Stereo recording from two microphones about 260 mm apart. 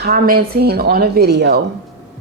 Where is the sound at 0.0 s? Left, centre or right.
Right.